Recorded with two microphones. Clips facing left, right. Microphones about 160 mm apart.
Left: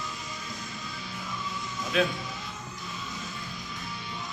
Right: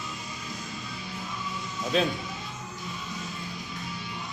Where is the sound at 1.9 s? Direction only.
30° right (ahead or behind).